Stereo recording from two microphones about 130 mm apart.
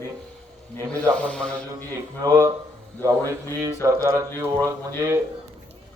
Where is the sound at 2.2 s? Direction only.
25° right (ahead or behind).